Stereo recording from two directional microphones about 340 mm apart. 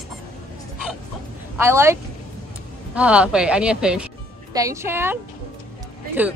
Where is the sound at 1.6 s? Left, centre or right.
Centre.